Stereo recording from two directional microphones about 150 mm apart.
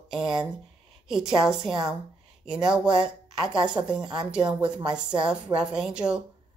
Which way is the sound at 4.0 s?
30° right (ahead or behind).